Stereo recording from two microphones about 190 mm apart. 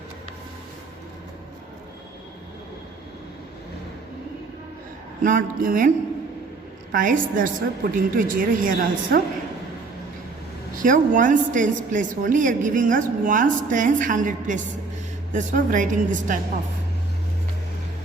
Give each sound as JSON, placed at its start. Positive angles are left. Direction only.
{"t": 5.2, "sound": "a woman's voice", "side_deg": -45}
{"t": 6.9, "sound": "a woman's voice", "side_deg": -45}
{"t": 10.8, "sound": "a woman's voice", "side_deg": -45}